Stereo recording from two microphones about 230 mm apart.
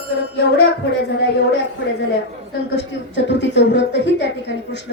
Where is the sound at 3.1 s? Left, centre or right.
Left.